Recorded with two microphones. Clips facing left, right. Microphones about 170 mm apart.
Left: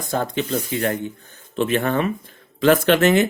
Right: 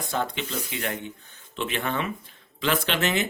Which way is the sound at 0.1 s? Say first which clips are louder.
Left 7 dB; 40° left (ahead or behind).